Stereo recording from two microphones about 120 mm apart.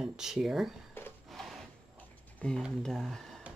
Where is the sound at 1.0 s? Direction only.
20° left (ahead or behind).